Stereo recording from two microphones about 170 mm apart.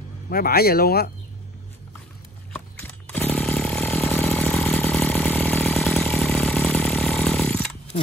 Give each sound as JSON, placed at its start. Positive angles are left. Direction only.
{"t": 0.3, "sound": "speech", "side_deg": 65}
{"t": 2.5, "sound": "chainsaw", "side_deg": 5}